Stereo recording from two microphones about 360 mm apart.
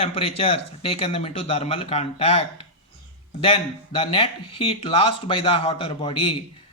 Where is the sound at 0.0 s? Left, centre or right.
Centre.